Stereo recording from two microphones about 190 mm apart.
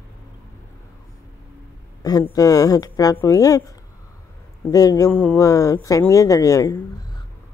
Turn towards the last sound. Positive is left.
turn(degrees=20)  # may be behind; listen again after turning